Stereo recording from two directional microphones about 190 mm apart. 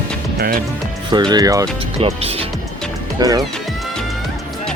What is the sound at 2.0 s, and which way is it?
Speech, 30° right (ahead or behind).